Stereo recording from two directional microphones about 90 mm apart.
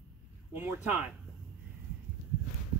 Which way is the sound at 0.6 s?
20° right (ahead or behind).